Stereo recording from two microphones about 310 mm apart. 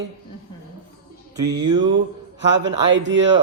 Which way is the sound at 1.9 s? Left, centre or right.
Right.